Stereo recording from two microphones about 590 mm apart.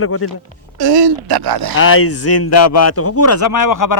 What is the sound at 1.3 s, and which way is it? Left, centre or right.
Speech, right.